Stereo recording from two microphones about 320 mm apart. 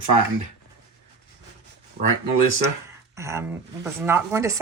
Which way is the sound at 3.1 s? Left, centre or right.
Centre.